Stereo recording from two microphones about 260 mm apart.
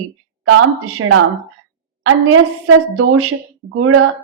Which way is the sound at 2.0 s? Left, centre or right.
Right.